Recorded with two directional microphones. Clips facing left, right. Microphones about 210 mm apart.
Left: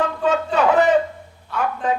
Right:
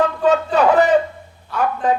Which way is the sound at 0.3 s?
35° right (ahead or behind).